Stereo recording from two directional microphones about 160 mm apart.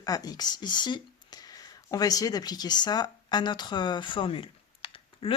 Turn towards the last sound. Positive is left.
turn(degrees=35)  # may be behind; listen again after turning